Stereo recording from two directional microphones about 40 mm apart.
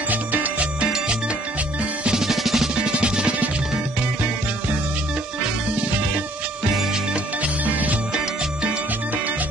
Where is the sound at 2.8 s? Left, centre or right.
Right.